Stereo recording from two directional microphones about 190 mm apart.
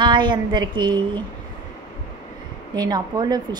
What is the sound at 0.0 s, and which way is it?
A woman's voice, 25° right (ahead or behind).